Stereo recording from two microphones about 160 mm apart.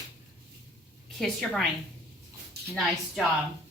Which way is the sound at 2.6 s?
85° right.